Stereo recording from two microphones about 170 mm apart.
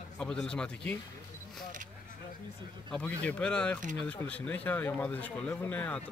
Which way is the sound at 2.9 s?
5° left (ahead or behind).